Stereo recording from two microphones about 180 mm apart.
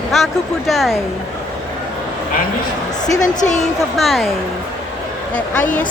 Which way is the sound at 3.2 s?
40° left (ahead or behind).